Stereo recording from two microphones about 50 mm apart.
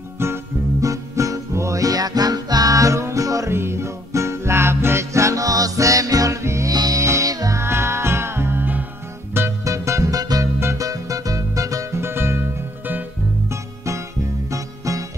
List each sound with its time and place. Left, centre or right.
0.2 s music: right
2.8 s music: right
3.5 s music: right
9.7 s music: right
11.5 s music: right
12.0 s music: right
13.5 s music: right
14.5 s music: right